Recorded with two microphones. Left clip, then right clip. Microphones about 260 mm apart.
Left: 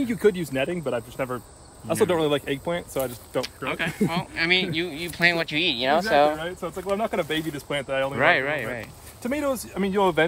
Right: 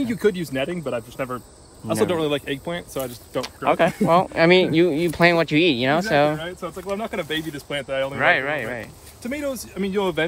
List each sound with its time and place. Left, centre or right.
0.0 s speech: centre
3.3 s speech: centre
6.4 s speech: centre
9.2 s speech: centre